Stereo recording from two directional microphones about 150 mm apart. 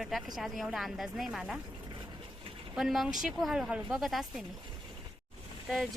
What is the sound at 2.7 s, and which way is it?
A woman's voice, centre (ahead or behind).